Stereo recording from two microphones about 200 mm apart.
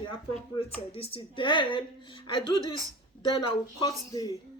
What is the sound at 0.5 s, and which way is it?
Speech, 30° left (ahead or behind).